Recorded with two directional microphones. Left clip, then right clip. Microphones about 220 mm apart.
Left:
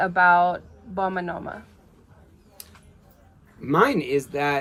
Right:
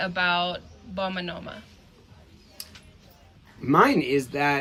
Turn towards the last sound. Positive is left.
turn(degrees=0)  # may be behind; listen again after turning